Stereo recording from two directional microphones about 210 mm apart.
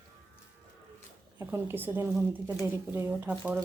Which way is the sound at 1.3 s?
10° right (ahead or behind).